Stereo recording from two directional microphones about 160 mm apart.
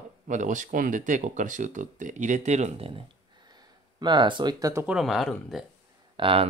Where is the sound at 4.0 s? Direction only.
30° right (ahead or behind).